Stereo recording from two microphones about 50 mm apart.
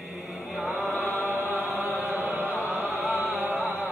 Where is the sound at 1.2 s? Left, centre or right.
Right.